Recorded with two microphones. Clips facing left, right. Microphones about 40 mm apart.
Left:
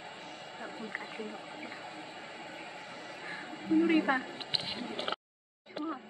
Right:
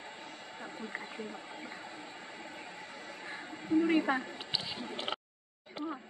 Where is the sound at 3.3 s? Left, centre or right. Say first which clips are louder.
Left 2 dB; centre.